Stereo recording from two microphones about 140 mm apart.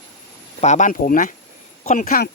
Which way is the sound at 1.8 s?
55° left (ahead or behind).